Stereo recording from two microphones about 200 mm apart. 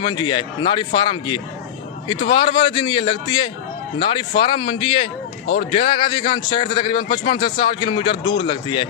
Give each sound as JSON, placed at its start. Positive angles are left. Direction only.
{"t": 0.0, "sound": "a man's voice", "side_deg": 25}